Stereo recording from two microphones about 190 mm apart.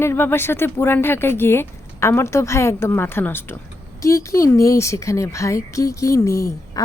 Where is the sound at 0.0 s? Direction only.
10° left (ahead or behind).